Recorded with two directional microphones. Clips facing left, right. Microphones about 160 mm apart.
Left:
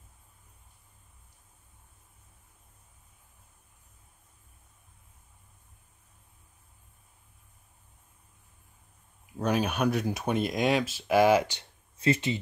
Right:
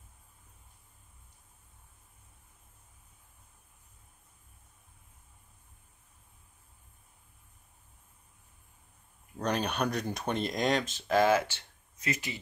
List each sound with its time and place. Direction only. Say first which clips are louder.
9.2 s speech: left 4 dB; 5° left (ahead or behind)
12.0 s speech: left 9 dB; 25° left (ahead or behind)